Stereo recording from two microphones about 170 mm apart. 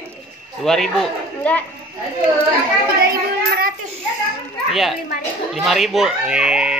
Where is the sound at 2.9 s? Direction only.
65° right (ahead or behind).